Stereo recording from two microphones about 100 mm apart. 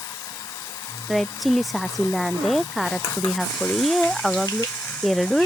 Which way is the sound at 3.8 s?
Centre (ahead or behind).